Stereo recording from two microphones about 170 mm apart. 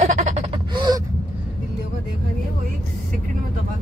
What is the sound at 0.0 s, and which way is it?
Gasp, 45° right (ahead or behind).